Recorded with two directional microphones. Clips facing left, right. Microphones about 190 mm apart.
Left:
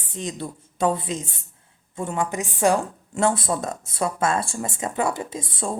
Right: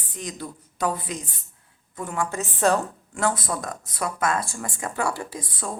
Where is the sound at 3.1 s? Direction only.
25° left (ahead or behind).